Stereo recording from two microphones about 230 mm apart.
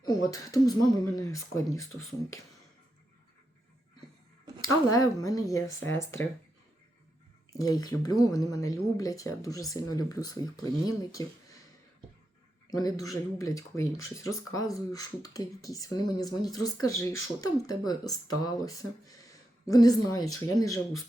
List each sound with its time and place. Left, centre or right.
0.0 s speech: centre
4.9 s speech: centre
7.6 s speech: centre
12.7 s speech: centre